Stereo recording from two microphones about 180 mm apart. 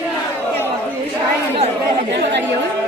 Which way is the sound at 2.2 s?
75° right (ahead or behind).